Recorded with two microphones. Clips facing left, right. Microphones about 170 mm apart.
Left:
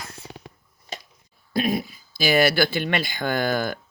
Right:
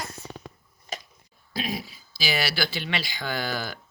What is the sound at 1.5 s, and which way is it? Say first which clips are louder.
Speech: left 8 dB; 50° left (ahead or behind).